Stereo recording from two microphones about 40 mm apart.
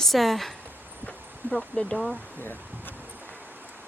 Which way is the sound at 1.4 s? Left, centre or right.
Right.